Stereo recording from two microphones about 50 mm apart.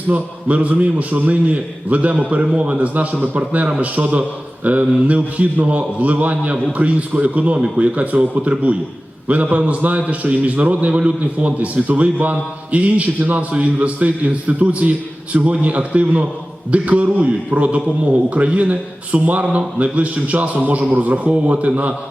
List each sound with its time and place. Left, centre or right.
0.1 s a man's voice: right